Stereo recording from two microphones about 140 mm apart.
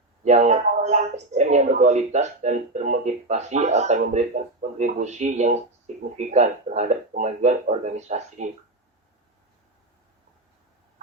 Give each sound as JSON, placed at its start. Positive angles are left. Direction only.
{"t": 0.3, "sound": "speech", "side_deg": -55}